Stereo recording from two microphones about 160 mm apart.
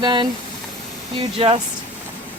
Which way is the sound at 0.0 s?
25° right (ahead or behind).